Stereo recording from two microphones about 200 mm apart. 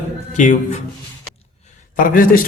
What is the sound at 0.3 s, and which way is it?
Speech, 40° left (ahead or behind).